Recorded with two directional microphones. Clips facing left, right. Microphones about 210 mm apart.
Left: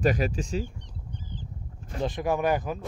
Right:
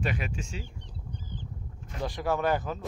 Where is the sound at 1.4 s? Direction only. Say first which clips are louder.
Even; 30° left (ahead or behind).